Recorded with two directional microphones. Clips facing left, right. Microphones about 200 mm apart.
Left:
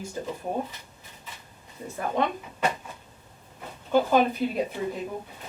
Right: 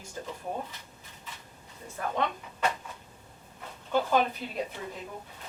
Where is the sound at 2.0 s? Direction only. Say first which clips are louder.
Left 4 dB; 15° left (ahead or behind).